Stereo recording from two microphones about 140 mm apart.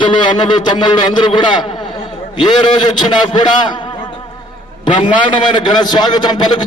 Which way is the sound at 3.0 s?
35° left (ahead or behind).